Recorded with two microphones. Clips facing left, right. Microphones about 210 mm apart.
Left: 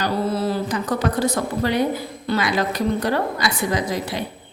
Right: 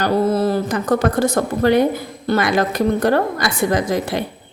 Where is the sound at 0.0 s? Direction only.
50° right (ahead or behind).